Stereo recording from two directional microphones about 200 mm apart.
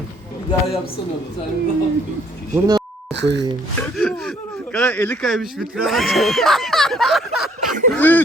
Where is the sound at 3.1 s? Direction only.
60° right (ahead or behind).